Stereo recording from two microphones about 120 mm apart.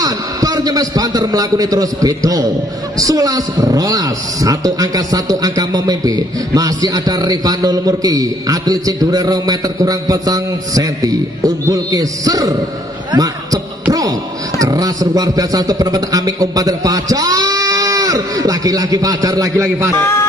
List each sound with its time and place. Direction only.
0.0 s a man's voice: 30° right (ahead or behind)
14.6 s a man's voice: 30° right (ahead or behind)
20.0 s speech: 20° left (ahead or behind)